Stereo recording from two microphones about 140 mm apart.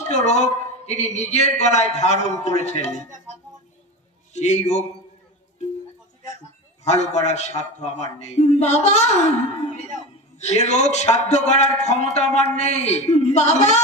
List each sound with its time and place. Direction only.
0.0 s speech: 55° left (ahead or behind)
4.3 s speech: 55° left (ahead or behind)
6.8 s a man's voice: 55° left (ahead or behind)